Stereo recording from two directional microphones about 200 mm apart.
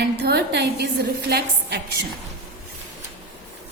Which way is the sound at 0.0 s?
55° right (ahead or behind).